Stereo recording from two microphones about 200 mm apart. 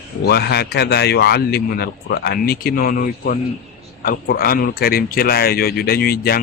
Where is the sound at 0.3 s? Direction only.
55° left (ahead or behind).